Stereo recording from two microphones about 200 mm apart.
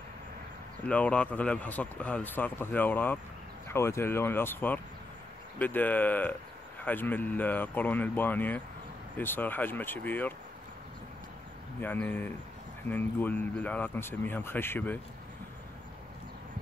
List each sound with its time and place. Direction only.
0.8 s speech: 5° left (ahead or behind)
11.8 s speech: 10° left (ahead or behind)